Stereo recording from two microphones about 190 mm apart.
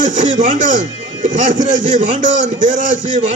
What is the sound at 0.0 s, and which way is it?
A man's voice, 40° right (ahead or behind).